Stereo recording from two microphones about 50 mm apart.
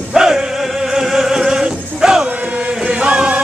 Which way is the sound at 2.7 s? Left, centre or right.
Centre.